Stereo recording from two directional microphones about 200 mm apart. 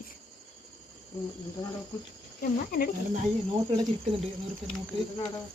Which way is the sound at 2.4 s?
50° left (ahead or behind).